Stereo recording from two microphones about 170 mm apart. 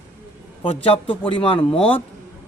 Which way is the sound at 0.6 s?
35° left (ahead or behind).